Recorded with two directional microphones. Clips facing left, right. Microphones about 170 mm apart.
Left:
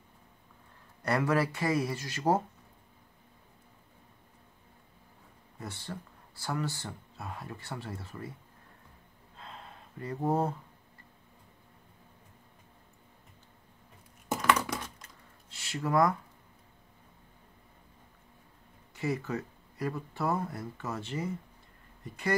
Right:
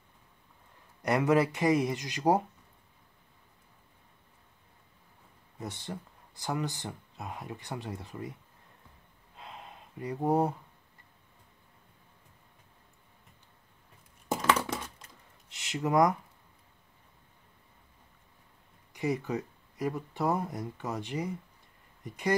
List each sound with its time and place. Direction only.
1.0 s speech: 20° right (ahead or behind)
5.6 s speech: 20° right (ahead or behind)
9.4 s a sound: 15° right (ahead or behind)
14.3 s a sound: 25° right (ahead or behind)
15.5 s speech: 20° right (ahead or behind)
18.9 s speech: 15° right (ahead or behind)